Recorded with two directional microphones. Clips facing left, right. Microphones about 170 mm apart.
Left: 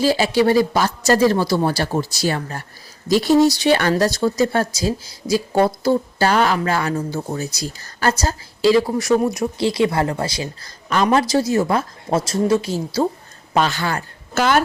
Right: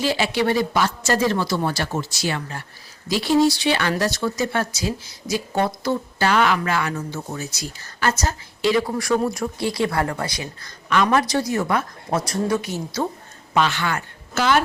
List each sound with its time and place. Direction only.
0.0 s a woman's voice: 35° left (ahead or behind)
13.5 s speech: 40° left (ahead or behind)
14.3 s speech: 45° left (ahead or behind)